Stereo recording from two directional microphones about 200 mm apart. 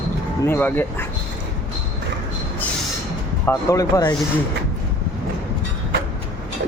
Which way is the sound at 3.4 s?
15° left (ahead or behind).